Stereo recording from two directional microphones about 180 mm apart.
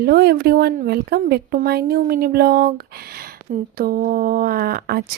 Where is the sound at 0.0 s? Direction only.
60° right (ahead or behind).